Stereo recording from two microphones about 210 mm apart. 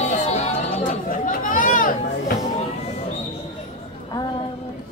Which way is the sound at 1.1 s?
40° left (ahead or behind).